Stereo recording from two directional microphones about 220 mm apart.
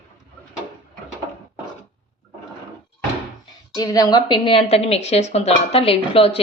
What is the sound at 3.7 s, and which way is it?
A woman's voice, 15° left (ahead or behind).